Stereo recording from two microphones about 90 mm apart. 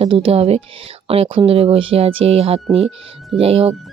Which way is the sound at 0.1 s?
85° right.